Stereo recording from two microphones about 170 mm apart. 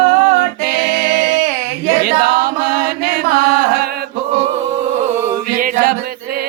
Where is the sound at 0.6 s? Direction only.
70° right (ahead or behind).